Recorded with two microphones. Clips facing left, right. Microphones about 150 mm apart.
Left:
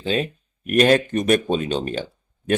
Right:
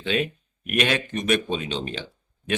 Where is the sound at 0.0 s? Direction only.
35° left (ahead or behind).